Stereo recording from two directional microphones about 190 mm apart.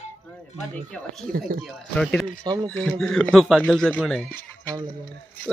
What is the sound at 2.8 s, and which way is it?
Speech, 5° left (ahead or behind).